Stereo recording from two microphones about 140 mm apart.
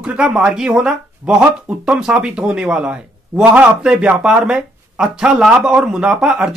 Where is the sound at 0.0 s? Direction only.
5° right (ahead or behind).